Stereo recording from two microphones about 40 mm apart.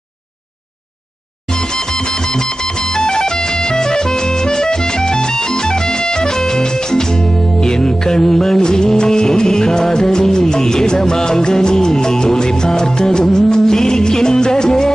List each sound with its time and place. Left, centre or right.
2.3 s music: centre